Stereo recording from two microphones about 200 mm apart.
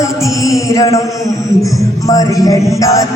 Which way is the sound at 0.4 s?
15° left (ahead or behind).